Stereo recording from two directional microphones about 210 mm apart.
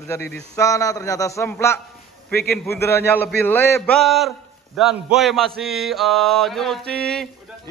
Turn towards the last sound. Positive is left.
turn(degrees=5)  # may be behind; listen again after turning